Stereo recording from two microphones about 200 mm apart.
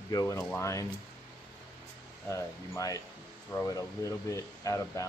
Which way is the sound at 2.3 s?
15° left (ahead or behind).